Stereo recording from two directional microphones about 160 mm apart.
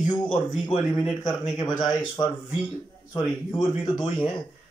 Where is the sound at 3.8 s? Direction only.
25° left (ahead or behind).